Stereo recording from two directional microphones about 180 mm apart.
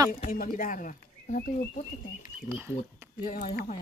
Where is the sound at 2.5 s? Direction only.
15° right (ahead or behind).